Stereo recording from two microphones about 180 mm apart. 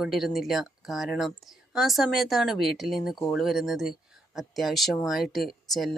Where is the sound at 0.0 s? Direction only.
Centre (ahead or behind).